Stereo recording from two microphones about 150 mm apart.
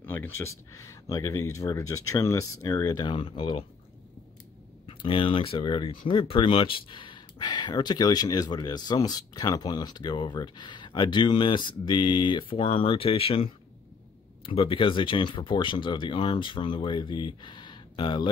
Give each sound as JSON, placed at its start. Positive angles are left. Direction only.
{"t": 0.0, "sound": "speech", "side_deg": 15}
{"t": 4.8, "sound": "speech", "side_deg": 35}